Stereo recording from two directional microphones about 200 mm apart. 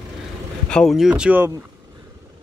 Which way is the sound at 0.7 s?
Centre (ahead or behind).